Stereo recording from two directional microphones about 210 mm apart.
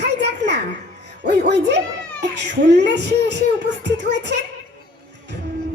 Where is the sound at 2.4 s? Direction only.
55° right (ahead or behind).